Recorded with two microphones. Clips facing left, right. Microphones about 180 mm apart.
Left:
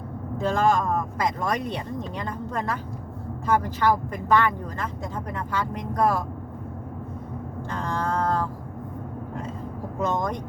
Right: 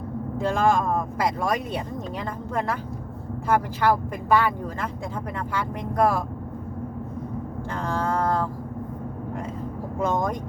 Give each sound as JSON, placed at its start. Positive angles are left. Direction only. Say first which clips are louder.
{"t": 0.3, "sound": "speech", "louder": "even", "side_deg": -10}
{"t": 10.0, "sound": "speech", "louder": "right 1 dB", "side_deg": -10}